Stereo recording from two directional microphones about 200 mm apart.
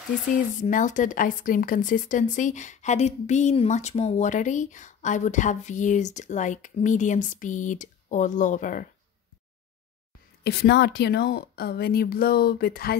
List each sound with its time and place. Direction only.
0.3 s speech: 40° left (ahead or behind)
10.4 s a woman's voice: 55° left (ahead or behind)